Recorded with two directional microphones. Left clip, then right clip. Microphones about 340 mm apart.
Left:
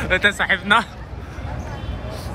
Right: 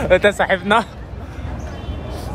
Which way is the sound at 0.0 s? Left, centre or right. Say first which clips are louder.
Right 4 dB; centre.